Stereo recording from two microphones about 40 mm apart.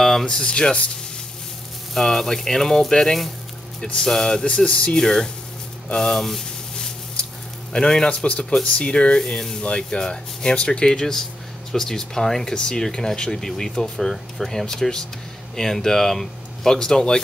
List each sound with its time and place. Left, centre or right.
0.2 s speech: centre
2.0 s speech: centre; by 4.9 s left
4.9 s speech: centre
5.9 s a sound: centre
7.7 s speech: left
9.2 s speech: centre
10.9 s speech: centre
13.9 s speech: centre